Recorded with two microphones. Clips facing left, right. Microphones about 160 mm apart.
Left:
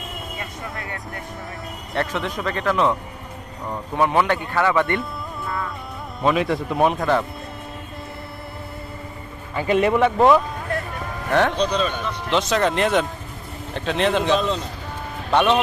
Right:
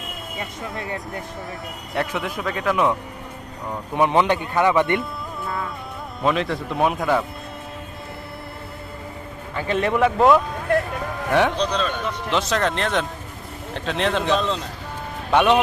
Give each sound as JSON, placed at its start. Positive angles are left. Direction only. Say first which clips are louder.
{"t": 0.3, "sound": "speech", "louder": "right 5 dB", "side_deg": -25}
{"t": 1.9, "sound": "speech", "louder": "left 1 dB", "side_deg": -5}
{"t": 3.9, "sound": "speech", "louder": "right 1 dB", "side_deg": -20}
{"t": 6.2, "sound": "a man's voice", "louder": "left 2 dB", "side_deg": 10}
{"t": 9.6, "sound": "speech", "louder": "left 2 dB", "side_deg": 10}
{"t": 11.5, "sound": "speech", "louder": "left 2 dB", "side_deg": 5}
{"t": 15.3, "sound": "speech", "louder": "right 1 dB", "side_deg": -10}